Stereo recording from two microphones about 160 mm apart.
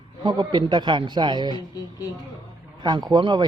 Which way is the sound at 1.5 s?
25° left (ahead or behind).